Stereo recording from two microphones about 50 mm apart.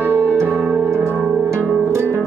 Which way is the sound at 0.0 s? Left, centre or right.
Right.